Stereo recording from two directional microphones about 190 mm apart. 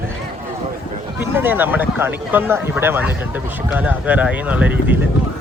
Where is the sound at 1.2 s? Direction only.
10° right (ahead or behind).